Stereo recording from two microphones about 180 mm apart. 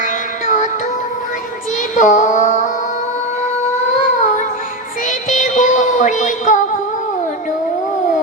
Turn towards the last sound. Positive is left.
turn(degrees=45)  # may be behind; listen again after turning